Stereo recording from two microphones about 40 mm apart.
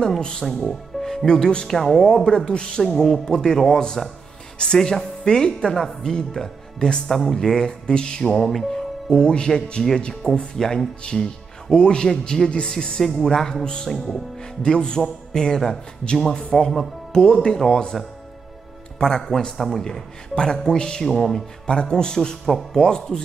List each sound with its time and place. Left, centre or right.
0.2 s speech: centre
1.8 s speech: centre
2.2 s a man's voice: centre
9.1 s a man's voice: left
17.9 s speech: centre
18.9 s a man's voice: centre
19.5 s speech: centre
21.6 s a man's voice: left